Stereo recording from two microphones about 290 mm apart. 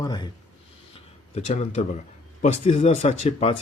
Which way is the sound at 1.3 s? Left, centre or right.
Left.